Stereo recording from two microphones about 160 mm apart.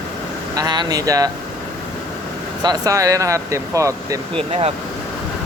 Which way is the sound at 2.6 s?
25° right (ahead or behind).